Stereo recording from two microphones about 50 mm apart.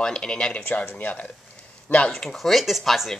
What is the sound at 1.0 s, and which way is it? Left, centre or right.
Speech, left.